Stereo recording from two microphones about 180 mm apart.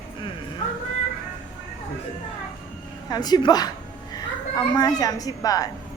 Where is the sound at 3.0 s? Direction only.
20° left (ahead or behind).